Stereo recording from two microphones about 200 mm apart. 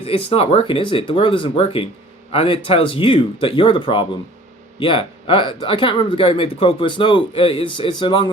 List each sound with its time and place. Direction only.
0.0 s speech: 30° left (ahead or behind)